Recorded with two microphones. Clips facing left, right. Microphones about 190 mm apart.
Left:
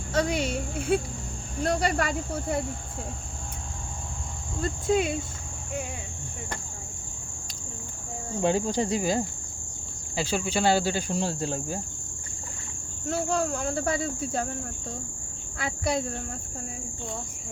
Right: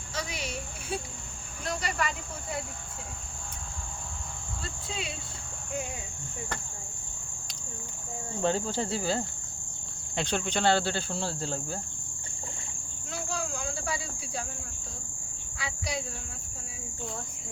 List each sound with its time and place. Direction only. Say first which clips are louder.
0.1 s speech: left 10 dB; 55° left (ahead or behind)
4.6 s speech: left 15 dB; 45° left (ahead or behind)
8.4 s speech: left 4 dB; 15° left (ahead or behind)
13.1 s speech: left 9 dB; 55° left (ahead or behind)
15.5 s speech: left 8 dB; 50° left (ahead or behind)